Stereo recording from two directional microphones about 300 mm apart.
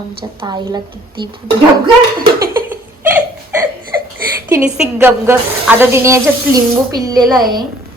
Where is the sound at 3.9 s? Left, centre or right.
Centre.